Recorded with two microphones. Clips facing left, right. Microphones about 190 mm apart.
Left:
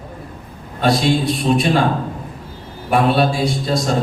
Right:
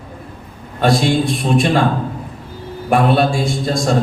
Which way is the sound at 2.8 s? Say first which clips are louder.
Right 1 dB; 50° right (ahead or behind).